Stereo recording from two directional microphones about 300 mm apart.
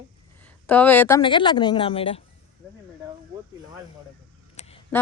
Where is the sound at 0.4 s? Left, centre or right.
Centre.